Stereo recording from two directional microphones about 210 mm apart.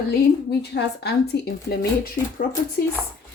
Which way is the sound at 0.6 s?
50° left (ahead or behind).